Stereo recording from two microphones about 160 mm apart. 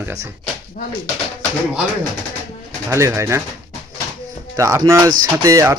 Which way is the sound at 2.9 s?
15° right (ahead or behind).